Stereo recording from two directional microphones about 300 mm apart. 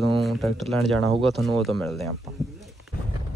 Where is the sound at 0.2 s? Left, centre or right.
Centre.